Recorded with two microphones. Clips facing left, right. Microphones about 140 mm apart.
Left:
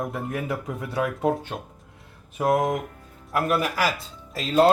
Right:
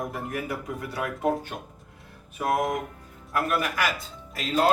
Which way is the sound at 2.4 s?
25° left (ahead or behind).